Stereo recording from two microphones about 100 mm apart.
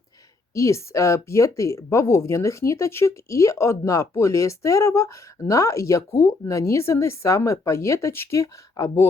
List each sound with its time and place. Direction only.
0.5 s speech: 30° left (ahead or behind)